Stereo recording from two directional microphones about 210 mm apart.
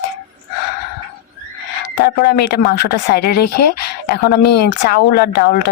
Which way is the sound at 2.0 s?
50° left (ahead or behind).